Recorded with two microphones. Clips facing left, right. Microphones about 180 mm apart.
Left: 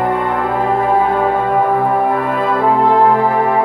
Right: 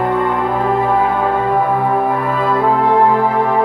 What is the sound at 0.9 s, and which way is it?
Music, 10° left (ahead or behind).